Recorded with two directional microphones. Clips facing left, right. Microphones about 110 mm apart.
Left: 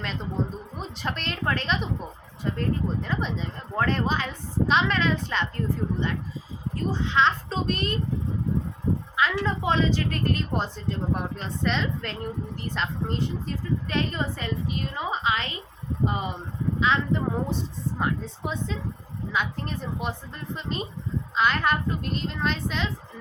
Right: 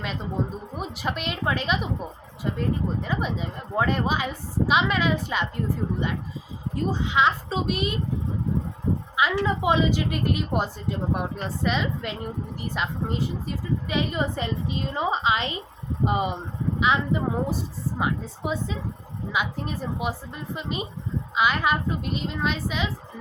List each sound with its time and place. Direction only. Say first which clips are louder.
0.8 s speech: right 3 dB; 10° right (ahead or behind)
9.3 s a woman's voice: right 3 dB; 10° right (ahead or behind)